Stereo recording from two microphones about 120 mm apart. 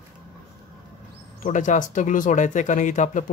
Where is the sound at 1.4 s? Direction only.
90° left.